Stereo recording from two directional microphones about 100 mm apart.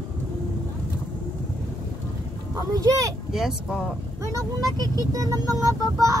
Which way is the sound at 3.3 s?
5° right (ahead or behind).